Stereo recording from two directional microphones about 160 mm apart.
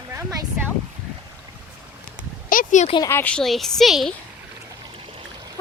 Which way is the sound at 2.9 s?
20° left (ahead or behind).